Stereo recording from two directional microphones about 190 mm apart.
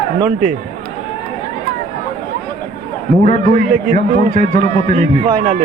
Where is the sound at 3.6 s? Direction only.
40° right (ahead or behind).